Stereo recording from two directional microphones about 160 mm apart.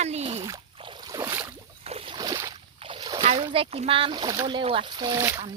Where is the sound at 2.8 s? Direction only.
30° right (ahead or behind).